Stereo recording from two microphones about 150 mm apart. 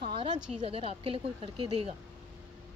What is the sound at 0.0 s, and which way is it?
A woman's voice, 40° right (ahead or behind).